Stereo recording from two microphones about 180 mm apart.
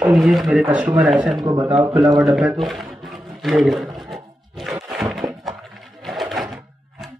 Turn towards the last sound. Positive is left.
turn(degrees=0)  # may be behind; listen again after turning